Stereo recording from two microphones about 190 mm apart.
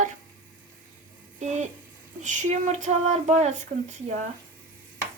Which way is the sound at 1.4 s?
40° right (ahead or behind).